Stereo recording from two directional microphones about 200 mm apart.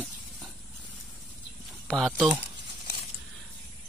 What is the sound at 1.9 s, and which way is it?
Speech, centre (ahead or behind).